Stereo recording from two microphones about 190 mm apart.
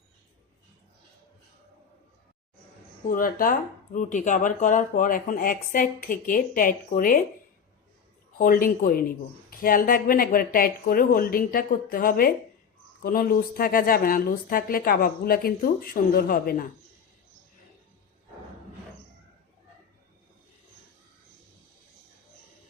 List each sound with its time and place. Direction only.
3.1 s speech: 45° left (ahead or behind)
8.4 s speech: 50° left (ahead or behind)